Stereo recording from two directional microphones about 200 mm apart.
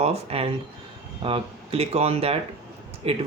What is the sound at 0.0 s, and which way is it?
Speech, 30° right (ahead or behind).